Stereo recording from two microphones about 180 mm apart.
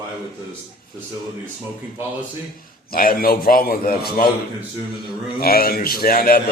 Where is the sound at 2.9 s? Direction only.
55° left (ahead or behind).